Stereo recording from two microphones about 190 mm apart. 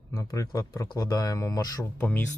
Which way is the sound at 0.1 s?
15° left (ahead or behind).